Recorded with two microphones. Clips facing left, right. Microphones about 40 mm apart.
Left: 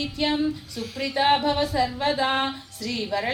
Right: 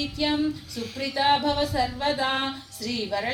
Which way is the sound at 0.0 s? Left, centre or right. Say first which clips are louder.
Left 1 dB; centre.